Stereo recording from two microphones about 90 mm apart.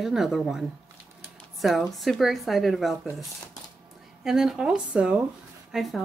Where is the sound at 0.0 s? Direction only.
5° right (ahead or behind).